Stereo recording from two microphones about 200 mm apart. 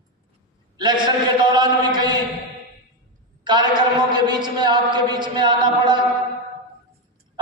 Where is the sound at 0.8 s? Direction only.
20° right (ahead or behind).